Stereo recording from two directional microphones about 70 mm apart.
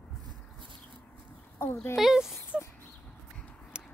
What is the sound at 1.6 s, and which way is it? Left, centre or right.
Speech, left.